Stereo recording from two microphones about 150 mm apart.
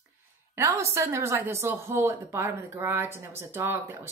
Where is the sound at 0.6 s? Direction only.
20° right (ahead or behind).